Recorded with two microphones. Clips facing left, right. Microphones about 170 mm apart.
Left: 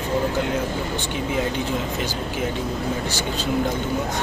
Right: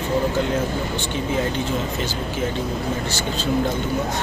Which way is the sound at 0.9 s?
15° left (ahead or behind).